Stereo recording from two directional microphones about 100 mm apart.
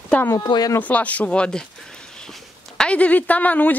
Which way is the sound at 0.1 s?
20° left (ahead or behind).